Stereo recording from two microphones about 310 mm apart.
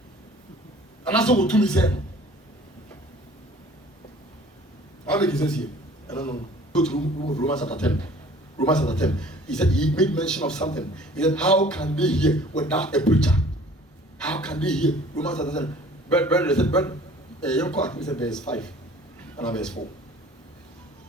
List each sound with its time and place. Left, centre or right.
1.0 s a man's voice: centre
5.0 s a man's voice: centre
6.9 s a man's voice: left
7.4 s a man's voice: centre